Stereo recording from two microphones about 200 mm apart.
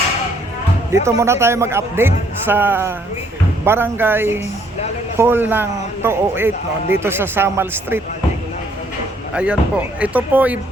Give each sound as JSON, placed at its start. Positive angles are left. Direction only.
{"t": 1.0, "sound": "a man's voice", "side_deg": -15}
{"t": 9.3, "sound": "a man's voice", "side_deg": -5}